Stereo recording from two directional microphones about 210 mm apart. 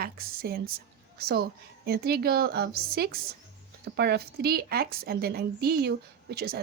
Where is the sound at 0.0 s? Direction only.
45° right (ahead or behind).